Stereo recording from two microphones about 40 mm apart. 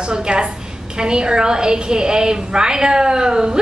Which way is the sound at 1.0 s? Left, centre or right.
Right.